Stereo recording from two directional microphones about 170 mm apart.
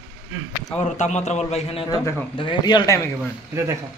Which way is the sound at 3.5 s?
15° right (ahead or behind).